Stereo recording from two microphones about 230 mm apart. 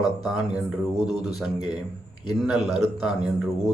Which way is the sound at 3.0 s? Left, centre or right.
Centre.